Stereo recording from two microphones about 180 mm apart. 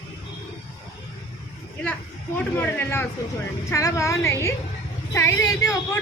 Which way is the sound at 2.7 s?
10° left (ahead or behind).